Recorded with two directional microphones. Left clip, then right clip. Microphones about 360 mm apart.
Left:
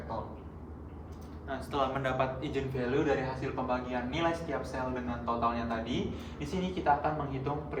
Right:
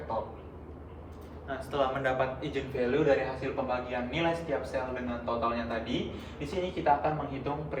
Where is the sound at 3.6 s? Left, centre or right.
Centre.